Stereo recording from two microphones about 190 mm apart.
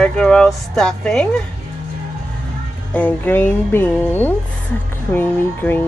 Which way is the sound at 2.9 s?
10° left (ahead or behind).